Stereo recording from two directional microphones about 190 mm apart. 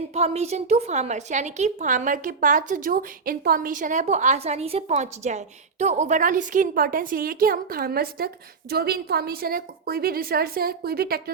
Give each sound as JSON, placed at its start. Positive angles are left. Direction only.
{"t": 0.1, "sound": "a woman's voice", "side_deg": -35}